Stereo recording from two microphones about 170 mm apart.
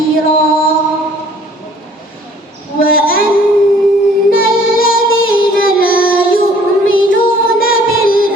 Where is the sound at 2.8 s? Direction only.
60° left (ahead or behind).